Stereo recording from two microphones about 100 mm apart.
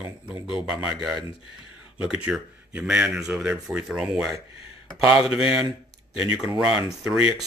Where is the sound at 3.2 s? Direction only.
25° right (ahead or behind).